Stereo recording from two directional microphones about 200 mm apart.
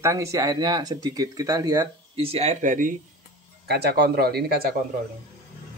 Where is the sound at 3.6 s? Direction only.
55° right (ahead or behind).